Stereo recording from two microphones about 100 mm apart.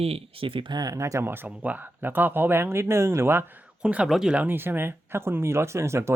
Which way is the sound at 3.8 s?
10° right (ahead or behind).